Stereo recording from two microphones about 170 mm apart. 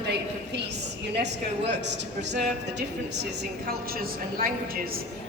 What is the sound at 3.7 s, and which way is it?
A woman's voice, 60° right (ahead or behind).